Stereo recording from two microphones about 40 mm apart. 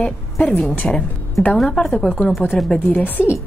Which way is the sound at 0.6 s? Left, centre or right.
Left.